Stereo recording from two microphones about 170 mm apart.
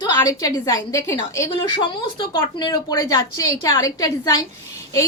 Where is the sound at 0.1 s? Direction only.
20° left (ahead or behind).